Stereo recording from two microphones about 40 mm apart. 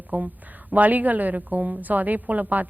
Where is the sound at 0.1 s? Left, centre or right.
Right.